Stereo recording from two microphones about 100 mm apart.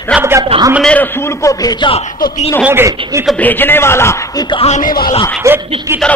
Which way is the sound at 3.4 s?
20° left (ahead or behind).